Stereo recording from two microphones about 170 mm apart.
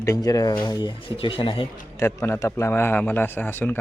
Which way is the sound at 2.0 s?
15° left (ahead or behind).